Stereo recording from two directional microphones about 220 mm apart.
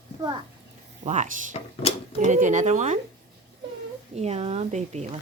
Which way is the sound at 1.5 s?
30° left (ahead or behind).